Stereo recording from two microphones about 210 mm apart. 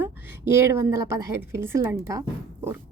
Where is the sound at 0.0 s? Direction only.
10° right (ahead or behind).